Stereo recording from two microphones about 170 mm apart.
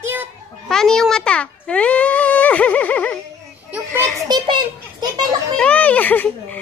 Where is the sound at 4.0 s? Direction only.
25° right (ahead or behind).